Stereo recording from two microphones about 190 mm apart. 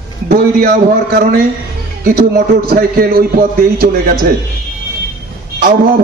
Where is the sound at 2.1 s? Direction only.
55° right (ahead or behind).